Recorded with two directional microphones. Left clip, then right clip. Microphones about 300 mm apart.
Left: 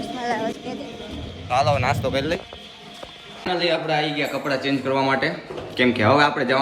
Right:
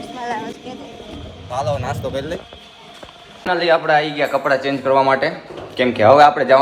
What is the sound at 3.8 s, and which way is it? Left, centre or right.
Speech, centre.